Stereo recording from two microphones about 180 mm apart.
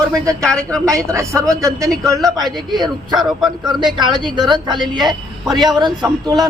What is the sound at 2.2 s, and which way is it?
Speech, centre (ahead or behind).